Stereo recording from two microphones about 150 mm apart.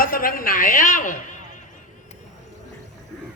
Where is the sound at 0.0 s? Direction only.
70° left (ahead or behind).